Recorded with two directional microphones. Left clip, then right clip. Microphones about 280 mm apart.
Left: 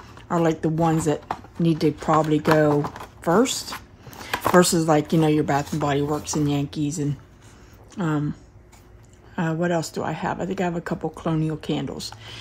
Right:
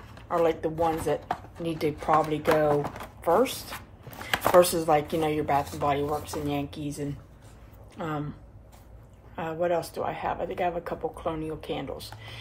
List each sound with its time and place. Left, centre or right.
0.3 s speech: left
2.8 s speech: centre
3.2 s speech: left
4.6 s speech: left
9.3 s speech: left